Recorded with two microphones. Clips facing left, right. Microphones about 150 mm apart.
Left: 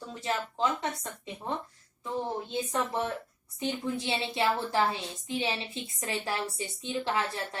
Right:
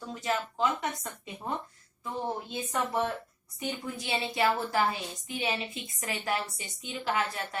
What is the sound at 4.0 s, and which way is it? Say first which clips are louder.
A woman's voice: right 1 dB; 25° left (ahead or behind).